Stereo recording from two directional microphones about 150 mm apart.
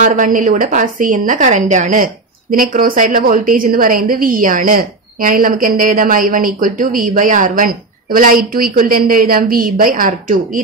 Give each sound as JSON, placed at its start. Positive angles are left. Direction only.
{"t": 0.0, "sound": "a woman's voice", "side_deg": -60}
{"t": 2.5, "sound": "a woman's voice", "side_deg": -65}